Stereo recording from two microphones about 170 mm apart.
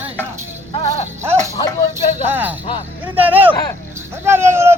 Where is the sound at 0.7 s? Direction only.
40° left (ahead or behind).